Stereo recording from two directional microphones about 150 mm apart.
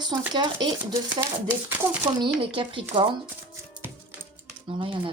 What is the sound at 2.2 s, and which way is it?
Speech, 35° right (ahead or behind).